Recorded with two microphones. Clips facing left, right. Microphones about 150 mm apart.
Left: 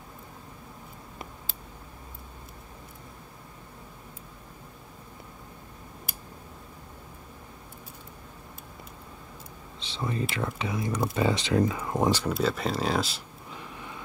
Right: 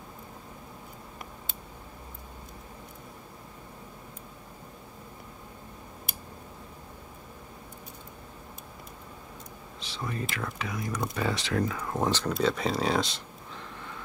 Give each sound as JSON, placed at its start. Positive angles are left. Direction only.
{"t": 9.8, "sound": "speech", "side_deg": 25}